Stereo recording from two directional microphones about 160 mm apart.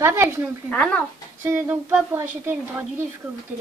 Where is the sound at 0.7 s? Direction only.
10° left (ahead or behind).